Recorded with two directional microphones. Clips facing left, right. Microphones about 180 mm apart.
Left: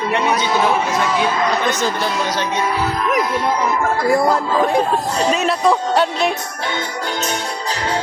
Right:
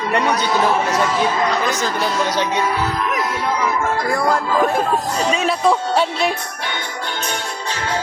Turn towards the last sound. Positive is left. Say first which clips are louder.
# left 1 dB
turn(degrees=0)  # may be behind; listen again after turning